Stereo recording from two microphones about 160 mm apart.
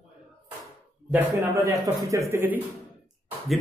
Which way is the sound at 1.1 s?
20° right (ahead or behind).